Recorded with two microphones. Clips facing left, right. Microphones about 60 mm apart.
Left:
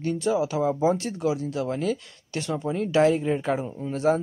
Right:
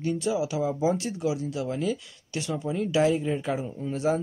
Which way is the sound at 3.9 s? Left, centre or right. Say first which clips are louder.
Left 3 dB; left.